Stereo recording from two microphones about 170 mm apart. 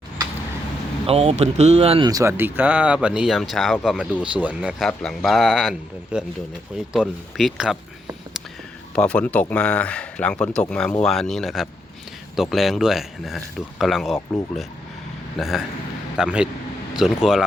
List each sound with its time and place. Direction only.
1.0 s speech: 35° right (ahead or behind)
2.0 s a man's voice: 20° right (ahead or behind); by 7.8 s centre (ahead or behind)
9.0 s a man's voice: 5° left (ahead or behind)
15.4 s a man's voice: centre (ahead or behind)